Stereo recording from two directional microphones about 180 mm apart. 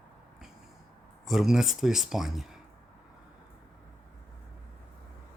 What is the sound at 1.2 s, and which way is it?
Speech, centre (ahead or behind).